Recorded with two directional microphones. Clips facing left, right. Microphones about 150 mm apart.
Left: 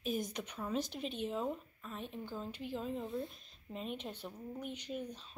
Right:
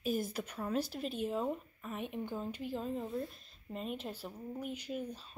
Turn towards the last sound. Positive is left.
turn(degrees=-5)  # may be behind; listen again after turning